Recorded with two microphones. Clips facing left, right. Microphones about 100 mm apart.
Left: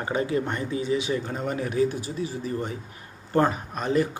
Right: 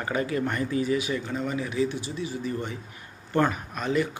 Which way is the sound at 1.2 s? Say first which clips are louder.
Left 1 dB; 45° left (ahead or behind).